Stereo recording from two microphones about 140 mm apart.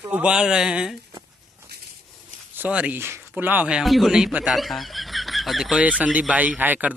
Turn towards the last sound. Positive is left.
turn(degrees=-10)  # may be behind; listen again after turning